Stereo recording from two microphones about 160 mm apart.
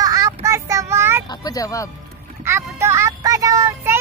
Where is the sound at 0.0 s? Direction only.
20° right (ahead or behind).